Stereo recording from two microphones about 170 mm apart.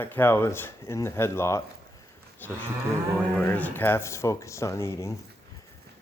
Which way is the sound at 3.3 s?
10° left (ahead or behind).